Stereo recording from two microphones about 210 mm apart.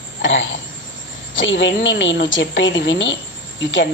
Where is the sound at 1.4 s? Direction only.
60° left (ahead or behind).